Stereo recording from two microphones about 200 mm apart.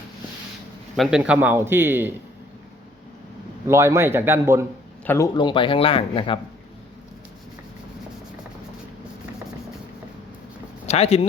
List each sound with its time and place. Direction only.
0.9 s a man's voice: 5° right (ahead or behind)
3.7 s a man's voice: 15° right (ahead or behind)
5.0 s speech: 15° left (ahead or behind)
10.8 s speech: 30° left (ahead or behind)